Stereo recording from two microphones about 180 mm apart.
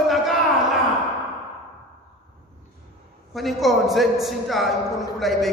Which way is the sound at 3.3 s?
Centre (ahead or behind).